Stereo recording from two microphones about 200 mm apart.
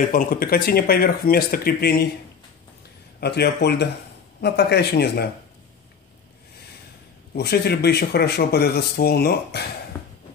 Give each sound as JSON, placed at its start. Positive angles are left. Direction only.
{"t": 0.1, "sound": "speech", "side_deg": 45}
{"t": 3.2, "sound": "speech", "side_deg": 55}
{"t": 7.3, "sound": "speech", "side_deg": 55}